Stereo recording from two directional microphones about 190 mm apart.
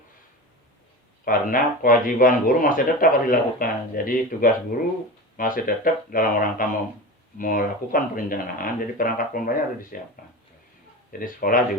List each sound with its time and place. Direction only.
1.2 s speech: 45° left (ahead or behind)
11.2 s speech: 50° left (ahead or behind)